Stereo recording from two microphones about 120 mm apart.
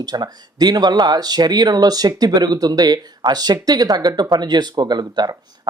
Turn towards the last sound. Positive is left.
turn(degrees=-35)  # may be behind; listen again after turning